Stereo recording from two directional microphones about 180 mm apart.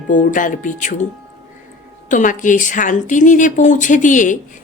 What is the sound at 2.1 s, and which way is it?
Speech, 45° left (ahead or behind).